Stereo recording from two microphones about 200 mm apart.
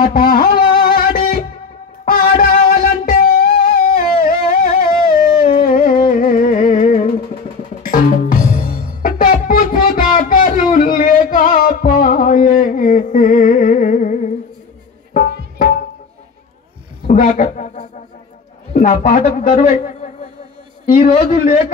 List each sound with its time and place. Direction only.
0.0 s music: 45° left (ahead or behind)
7.8 s music: 45° left (ahead or behind)
17.1 s a sound: 40° left (ahead or behind)
18.7 s a man's voice: 40° left (ahead or behind)
21.2 s a man's voice: 45° left (ahead or behind)